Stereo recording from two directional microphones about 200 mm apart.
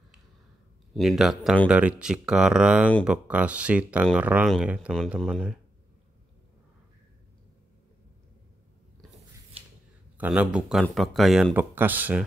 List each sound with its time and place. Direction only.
0.9 s speech: centre (ahead or behind)
9.6 s a sound: 30° right (ahead or behind)
10.1 s speech: 5° right (ahead or behind)